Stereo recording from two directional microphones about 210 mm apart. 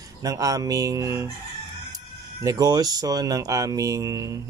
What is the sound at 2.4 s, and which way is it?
Speech, 20° right (ahead or behind).